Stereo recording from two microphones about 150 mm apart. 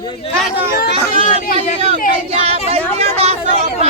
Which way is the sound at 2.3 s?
40° right (ahead or behind).